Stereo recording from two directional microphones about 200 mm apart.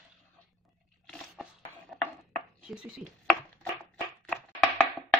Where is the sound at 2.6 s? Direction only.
5° right (ahead or behind).